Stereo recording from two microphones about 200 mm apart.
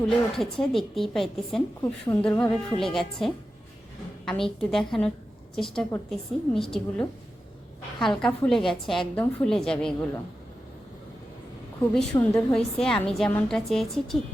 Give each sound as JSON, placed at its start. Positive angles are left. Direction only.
{"t": 0.0, "sound": "a woman's voice", "side_deg": 0}
{"t": 1.8, "sound": "a woman's voice", "side_deg": 15}
{"t": 11.8, "sound": "a woman's voice", "side_deg": 10}